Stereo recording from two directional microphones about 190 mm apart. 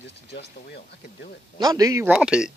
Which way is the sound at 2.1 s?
5° right (ahead or behind).